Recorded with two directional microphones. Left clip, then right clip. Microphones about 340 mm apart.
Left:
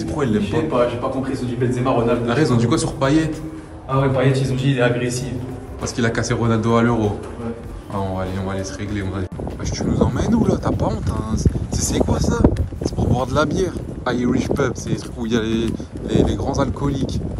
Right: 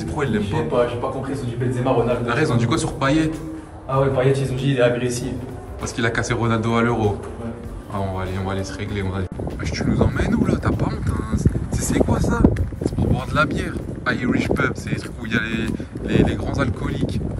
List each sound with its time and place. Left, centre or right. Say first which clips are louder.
0.0 s a man's voice: left 2 dB; centre
11.3 s a sound: left 1 dB; centre
12.1 s speech: left 1 dB; centre